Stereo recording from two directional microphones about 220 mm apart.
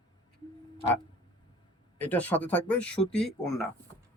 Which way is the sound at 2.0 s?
5° left (ahead or behind).